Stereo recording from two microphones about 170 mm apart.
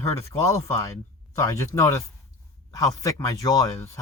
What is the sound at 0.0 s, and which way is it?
Speech, 15° left (ahead or behind).